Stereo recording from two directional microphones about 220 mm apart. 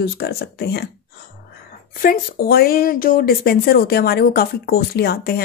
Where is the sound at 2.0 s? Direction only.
40° left (ahead or behind).